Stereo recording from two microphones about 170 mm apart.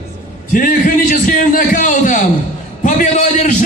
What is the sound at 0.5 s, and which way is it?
A man's voice, 55° left (ahead or behind).